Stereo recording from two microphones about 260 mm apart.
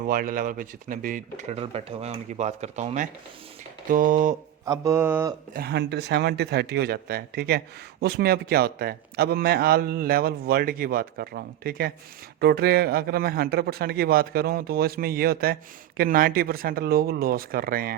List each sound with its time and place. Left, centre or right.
0.0 s a man's voice: right
4.6 s mantra: centre
5.5 s a man's voice: right